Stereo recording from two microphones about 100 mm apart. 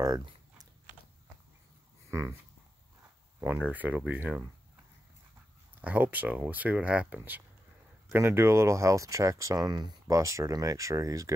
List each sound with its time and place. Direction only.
0.0 s biting: 35° right (ahead or behind)
2.0 s a sound: 25° right (ahead or behind)
3.4 s speech: 15° right (ahead or behind)
5.8 s speech: 15° right (ahead or behind); by 11.3 s 35° right (ahead or behind)